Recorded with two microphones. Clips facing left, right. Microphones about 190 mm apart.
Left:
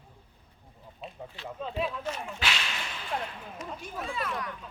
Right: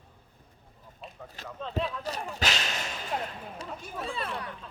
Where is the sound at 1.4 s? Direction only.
45° right (ahead or behind).